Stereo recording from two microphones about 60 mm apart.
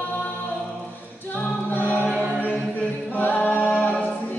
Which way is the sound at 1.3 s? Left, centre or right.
Left.